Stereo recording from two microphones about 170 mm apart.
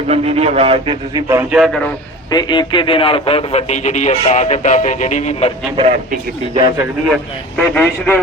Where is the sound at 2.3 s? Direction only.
25° left (ahead or behind).